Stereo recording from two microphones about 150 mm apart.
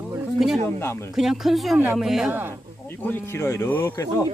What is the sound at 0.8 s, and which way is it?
Speech, 15° left (ahead or behind).